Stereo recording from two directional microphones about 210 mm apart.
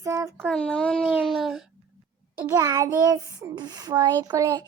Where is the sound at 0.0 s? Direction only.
15° right (ahead or behind).